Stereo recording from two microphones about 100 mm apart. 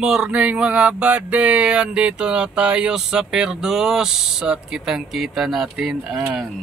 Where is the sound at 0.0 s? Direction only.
5° right (ahead or behind).